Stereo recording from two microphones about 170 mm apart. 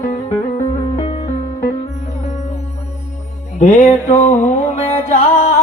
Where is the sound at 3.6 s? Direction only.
45° left (ahead or behind).